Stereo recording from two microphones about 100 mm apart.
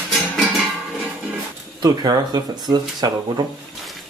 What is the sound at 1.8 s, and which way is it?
Speech, 45° right (ahead or behind).